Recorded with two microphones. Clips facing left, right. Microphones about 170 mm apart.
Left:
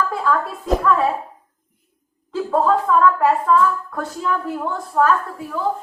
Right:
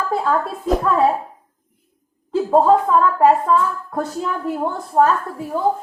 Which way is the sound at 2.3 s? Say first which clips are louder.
Right 4 dB; 30° right (ahead or behind).